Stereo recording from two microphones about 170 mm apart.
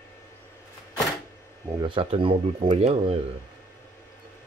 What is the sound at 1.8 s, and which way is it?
Speech, 30° right (ahead or behind).